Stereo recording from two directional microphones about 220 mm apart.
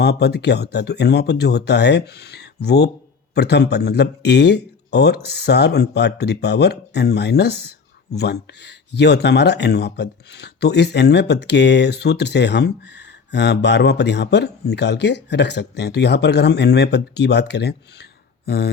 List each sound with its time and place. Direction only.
0.0 s speech: 50° left (ahead or behind)